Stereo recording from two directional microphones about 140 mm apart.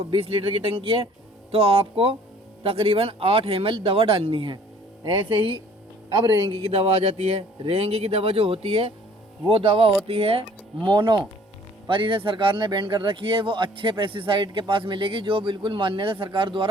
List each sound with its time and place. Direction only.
0.0 s a man's voice: 40° right (ahead or behind)